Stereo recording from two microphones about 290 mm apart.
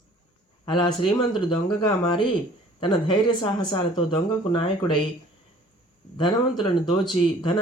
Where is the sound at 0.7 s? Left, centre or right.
Centre.